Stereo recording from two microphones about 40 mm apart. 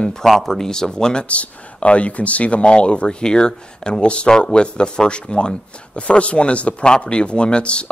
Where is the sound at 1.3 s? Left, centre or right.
Left.